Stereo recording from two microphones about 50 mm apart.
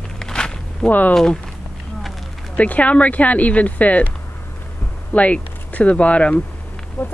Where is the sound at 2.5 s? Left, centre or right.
Left.